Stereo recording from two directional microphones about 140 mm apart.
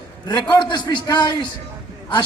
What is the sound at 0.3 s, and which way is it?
A man's voice, 30° left (ahead or behind).